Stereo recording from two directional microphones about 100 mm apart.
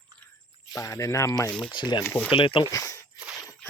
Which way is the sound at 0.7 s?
35° left (ahead or behind).